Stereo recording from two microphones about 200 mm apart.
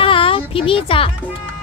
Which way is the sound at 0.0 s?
25° left (ahead or behind).